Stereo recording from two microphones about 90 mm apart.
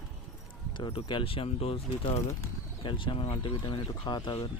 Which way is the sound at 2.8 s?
70° left (ahead or behind).